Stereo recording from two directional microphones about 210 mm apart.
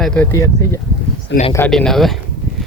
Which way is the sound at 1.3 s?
55° left (ahead or behind).